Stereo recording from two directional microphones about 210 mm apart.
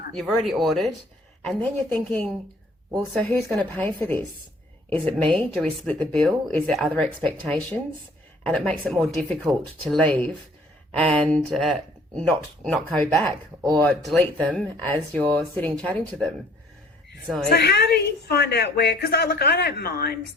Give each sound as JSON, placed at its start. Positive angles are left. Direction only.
{"t": 0.1, "sound": "a woman's voice", "side_deg": 0}
{"t": 17.5, "sound": "a woman's voice", "side_deg": 50}